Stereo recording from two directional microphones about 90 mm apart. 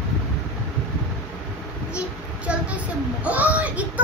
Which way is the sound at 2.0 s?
15° right (ahead or behind).